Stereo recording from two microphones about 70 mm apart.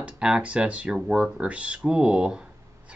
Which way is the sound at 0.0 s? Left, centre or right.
Centre.